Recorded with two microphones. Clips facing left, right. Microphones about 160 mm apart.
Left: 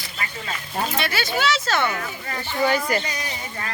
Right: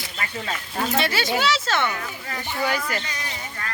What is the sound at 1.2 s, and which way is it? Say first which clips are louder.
Speech: even; 15° right (ahead or behind).